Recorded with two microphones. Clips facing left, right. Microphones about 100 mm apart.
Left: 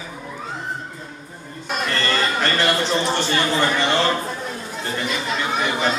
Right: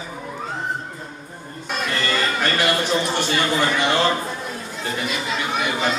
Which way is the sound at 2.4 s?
15° right (ahead or behind).